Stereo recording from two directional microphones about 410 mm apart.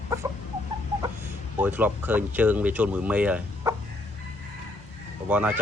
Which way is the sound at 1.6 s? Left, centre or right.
Centre.